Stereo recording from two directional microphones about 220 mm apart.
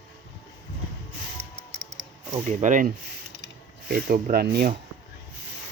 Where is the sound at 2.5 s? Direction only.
35° right (ahead or behind).